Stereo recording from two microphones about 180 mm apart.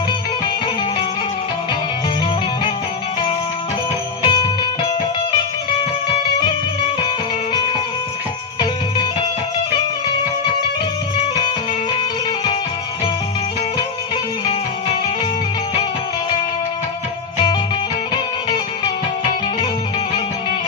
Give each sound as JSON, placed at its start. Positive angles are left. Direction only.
{"t": 4.2, "sound": "music", "side_deg": 25}